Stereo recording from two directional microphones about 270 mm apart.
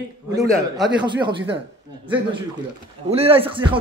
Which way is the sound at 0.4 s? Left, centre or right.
Centre.